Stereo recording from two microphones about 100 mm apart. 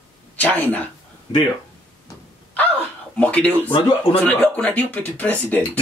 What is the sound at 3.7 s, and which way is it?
Speech, 60° left (ahead or behind).